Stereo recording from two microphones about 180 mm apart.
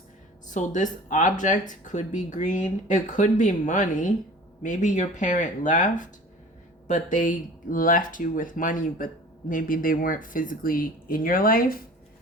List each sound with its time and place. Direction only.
0.4 s speech: 45° left (ahead or behind)